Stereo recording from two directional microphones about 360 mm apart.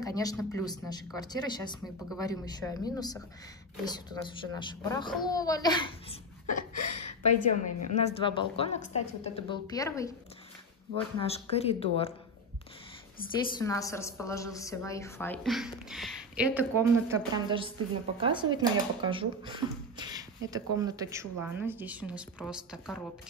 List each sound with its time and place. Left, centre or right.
0.0 s a child's voice: centre
11.1 s a child's voice: centre
13.6 s a woman's voice: centre